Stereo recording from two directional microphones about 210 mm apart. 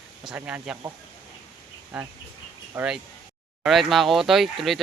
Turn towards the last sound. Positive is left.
turn(degrees=0)  # may be behind; listen again after turning